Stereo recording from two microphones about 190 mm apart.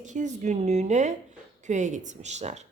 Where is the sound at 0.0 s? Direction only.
40° right (ahead or behind).